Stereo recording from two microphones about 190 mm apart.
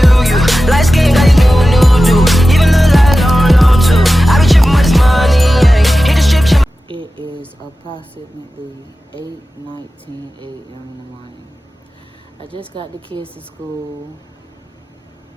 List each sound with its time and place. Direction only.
0.0 s music: centre (ahead or behind)
6.8 s music: 25° right (ahead or behind)
12.5 s a woman's voice: 30° right (ahead or behind)